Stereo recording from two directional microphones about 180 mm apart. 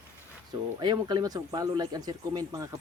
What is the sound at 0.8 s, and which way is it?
Speech, 25° right (ahead or behind).